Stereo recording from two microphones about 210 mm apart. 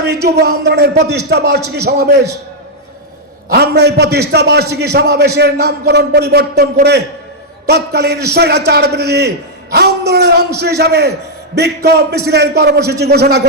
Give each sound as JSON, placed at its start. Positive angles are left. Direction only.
{"t": 0.0, "sound": "a man's voice", "side_deg": -50}
{"t": 3.5, "sound": "a man's voice", "side_deg": -50}